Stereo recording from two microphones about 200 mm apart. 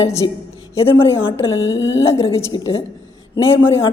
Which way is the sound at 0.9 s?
25° left (ahead or behind).